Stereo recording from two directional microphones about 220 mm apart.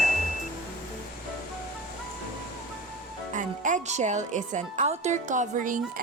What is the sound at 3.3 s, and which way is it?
Speech, 35° right (ahead or behind).